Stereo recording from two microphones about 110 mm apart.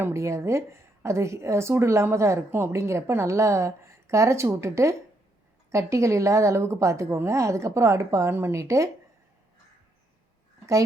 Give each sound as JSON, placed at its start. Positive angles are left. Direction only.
{"t": 0.0, "sound": "a woman's voice", "side_deg": -25}